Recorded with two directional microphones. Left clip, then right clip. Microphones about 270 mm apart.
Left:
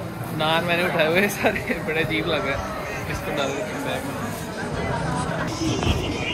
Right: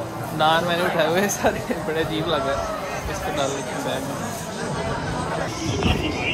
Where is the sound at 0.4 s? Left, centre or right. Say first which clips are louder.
Right 2 dB; centre.